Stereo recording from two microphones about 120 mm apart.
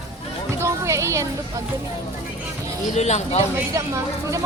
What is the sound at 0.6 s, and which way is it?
Music, 25° right (ahead or behind).